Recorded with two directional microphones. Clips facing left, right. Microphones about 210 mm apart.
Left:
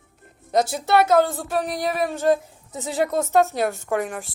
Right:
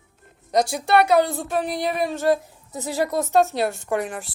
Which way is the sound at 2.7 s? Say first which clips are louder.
Even; 20° left (ahead or behind).